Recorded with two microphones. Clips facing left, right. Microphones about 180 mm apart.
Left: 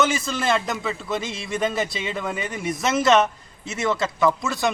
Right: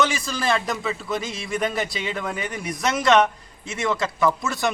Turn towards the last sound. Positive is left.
turn(degrees=0)  # may be behind; listen again after turning